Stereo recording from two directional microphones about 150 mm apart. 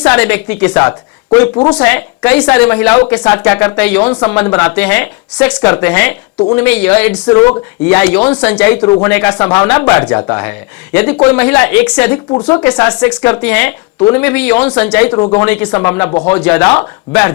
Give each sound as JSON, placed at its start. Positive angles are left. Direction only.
{"t": 0.0, "sound": "a woman's voice", "side_deg": 10}